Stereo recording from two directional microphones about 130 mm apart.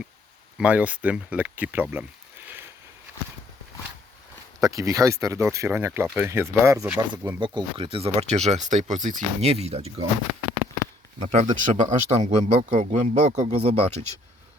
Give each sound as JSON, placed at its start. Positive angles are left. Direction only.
{"t": 0.6, "sound": "speech", "side_deg": -10}
{"t": 4.6, "sound": "speech", "side_deg": -25}
{"t": 6.8, "sound": "speech", "side_deg": -10}
{"t": 7.3, "sound": "speech", "side_deg": -35}
{"t": 9.4, "sound": "speech", "side_deg": -50}
{"t": 11.2, "sound": "speech", "side_deg": -60}